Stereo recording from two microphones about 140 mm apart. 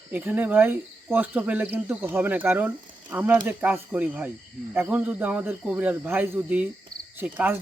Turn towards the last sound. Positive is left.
turn(degrees=-10)  # may be behind; listen again after turning